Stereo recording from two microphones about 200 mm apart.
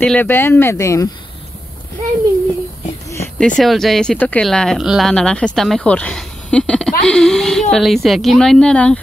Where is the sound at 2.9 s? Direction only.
15° left (ahead or behind).